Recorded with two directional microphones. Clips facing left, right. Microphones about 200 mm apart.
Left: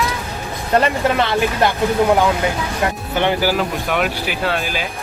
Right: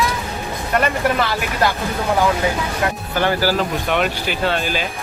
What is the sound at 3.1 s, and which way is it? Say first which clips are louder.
Speech: left 1 dB; 20° left (ahead or behind).